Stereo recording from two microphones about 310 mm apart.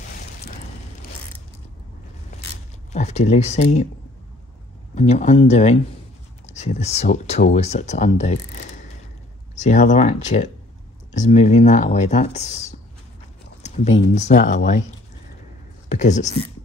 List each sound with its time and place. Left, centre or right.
2.3 s a sound: left
2.9 s speech: left
4.9 s speech: left
15.9 s speech: left